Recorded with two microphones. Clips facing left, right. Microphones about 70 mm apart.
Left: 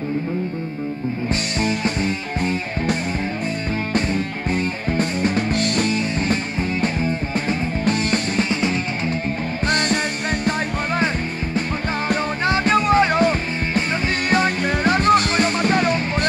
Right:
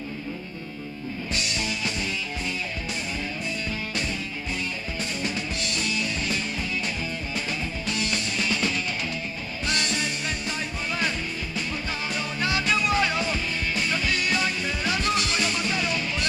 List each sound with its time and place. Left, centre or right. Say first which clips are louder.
1.3 s music: left 6 dB; left
8.5 s music: left 5 dB; left
9.7 s music: left 8 dB; left
12.1 s music: left 8 dB; left